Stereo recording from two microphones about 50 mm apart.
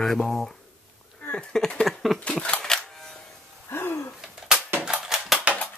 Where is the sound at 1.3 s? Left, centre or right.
Left.